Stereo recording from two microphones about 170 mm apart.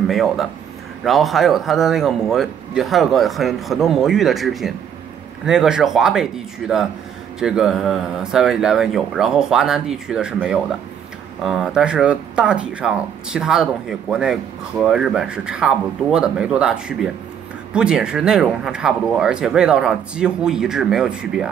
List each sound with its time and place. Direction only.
0.1 s speech: centre (ahead or behind)